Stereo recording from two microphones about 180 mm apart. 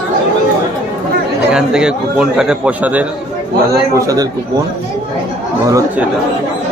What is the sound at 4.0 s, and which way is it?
Speech, 20° right (ahead or behind).